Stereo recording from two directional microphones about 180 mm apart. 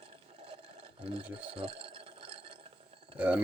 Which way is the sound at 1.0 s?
30° right (ahead or behind).